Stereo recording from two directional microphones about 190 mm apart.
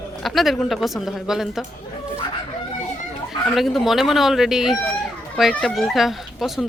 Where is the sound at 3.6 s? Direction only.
Centre (ahead or behind).